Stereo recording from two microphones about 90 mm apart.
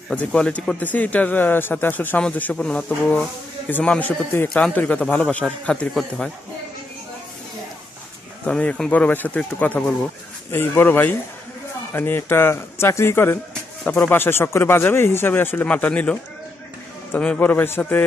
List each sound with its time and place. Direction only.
0.1 s speech: 10° left (ahead or behind)
8.5 s speech: 10° left (ahead or behind)
10.5 s speech: 25° left (ahead or behind)